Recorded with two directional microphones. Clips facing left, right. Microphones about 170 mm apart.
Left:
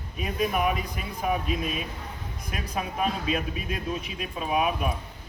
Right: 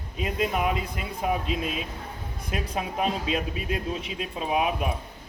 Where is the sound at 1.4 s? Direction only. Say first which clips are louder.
Even; 25° right (ahead or behind).